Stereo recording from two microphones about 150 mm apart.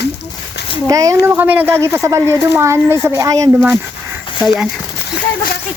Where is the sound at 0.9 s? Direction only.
20° right (ahead or behind).